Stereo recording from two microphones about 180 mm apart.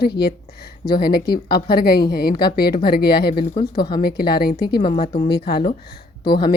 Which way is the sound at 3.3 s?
25° left (ahead or behind).